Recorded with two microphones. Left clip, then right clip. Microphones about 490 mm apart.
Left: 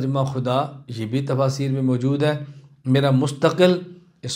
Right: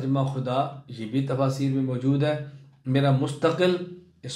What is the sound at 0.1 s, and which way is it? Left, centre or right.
A man's voice, left.